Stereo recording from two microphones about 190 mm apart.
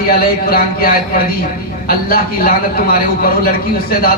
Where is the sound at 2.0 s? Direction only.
50° left (ahead or behind).